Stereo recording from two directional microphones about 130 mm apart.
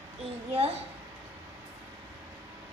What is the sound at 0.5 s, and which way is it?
Speech, 50° right (ahead or behind).